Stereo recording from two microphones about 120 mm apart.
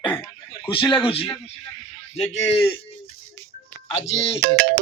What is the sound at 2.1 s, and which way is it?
Speech, 70° left (ahead or behind).